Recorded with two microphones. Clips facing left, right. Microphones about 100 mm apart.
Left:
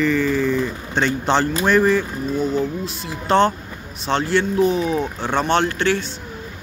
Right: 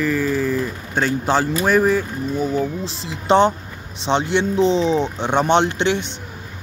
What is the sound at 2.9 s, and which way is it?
Speech, 20° right (ahead or behind).